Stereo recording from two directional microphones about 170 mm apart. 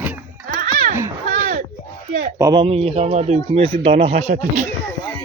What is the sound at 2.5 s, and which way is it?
Speech, 35° right (ahead or behind).